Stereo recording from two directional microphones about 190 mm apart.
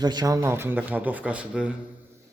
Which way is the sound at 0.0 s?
20° right (ahead or behind).